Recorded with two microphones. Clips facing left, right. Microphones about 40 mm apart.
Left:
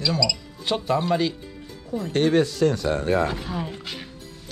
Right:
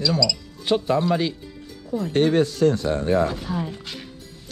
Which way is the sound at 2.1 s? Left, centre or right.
Left.